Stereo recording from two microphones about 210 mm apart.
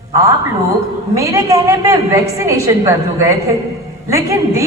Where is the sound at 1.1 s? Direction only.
15° right (ahead or behind).